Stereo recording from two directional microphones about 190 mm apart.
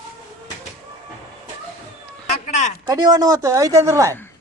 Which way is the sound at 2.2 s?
40° left (ahead or behind).